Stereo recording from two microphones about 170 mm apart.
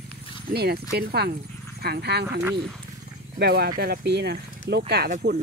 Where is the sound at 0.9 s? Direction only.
70° right (ahead or behind).